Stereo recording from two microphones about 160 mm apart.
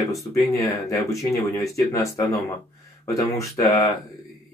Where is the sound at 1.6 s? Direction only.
20° left (ahead or behind).